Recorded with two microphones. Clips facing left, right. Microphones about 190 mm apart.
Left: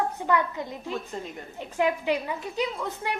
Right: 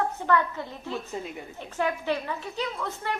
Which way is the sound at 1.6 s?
15° left (ahead or behind).